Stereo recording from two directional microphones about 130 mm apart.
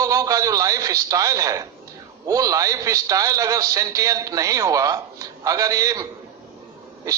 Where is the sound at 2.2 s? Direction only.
25° right (ahead or behind).